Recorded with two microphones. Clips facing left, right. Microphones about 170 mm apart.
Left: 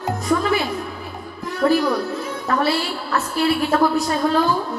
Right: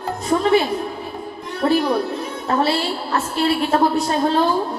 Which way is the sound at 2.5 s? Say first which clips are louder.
Right 1 dB; 30° right (ahead or behind).